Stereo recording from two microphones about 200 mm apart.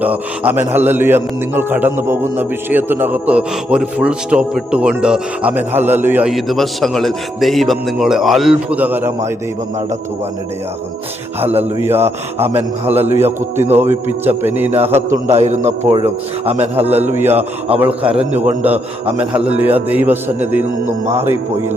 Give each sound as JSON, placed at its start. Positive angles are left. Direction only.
{"t": 0.0, "sound": "a man's voice", "side_deg": -10}
{"t": 11.3, "sound": "a man's voice", "side_deg": -10}
{"t": 15.3, "sound": "a man's voice", "side_deg": -35}
{"t": 17.1, "sound": "a man's voice", "side_deg": -10}